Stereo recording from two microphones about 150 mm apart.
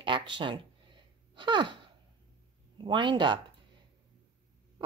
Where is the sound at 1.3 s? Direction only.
30° right (ahead or behind).